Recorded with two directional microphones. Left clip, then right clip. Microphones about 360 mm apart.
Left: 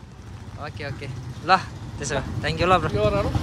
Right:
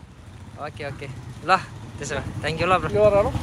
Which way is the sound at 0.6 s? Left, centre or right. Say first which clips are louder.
Right 1 dB; centre.